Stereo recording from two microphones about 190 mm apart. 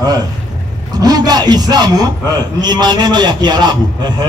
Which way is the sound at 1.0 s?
20° right (ahead or behind).